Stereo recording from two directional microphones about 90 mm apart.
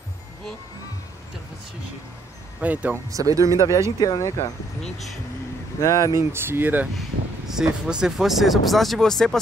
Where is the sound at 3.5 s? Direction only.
35° left (ahead or behind).